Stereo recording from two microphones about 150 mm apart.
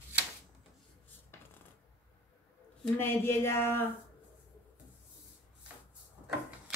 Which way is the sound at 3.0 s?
15° left (ahead or behind).